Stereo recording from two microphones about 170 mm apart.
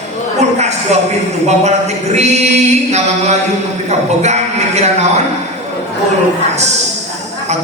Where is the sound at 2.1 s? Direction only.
40° right (ahead or behind).